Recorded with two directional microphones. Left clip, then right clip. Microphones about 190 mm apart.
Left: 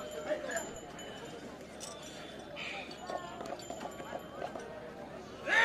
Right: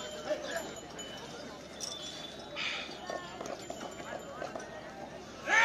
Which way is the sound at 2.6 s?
Centre (ahead or behind).